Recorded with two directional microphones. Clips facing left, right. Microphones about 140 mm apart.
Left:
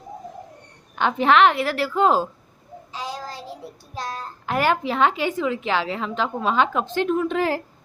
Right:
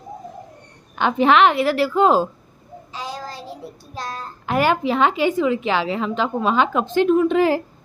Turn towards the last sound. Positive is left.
turn(degrees=-10)  # may be behind; listen again after turning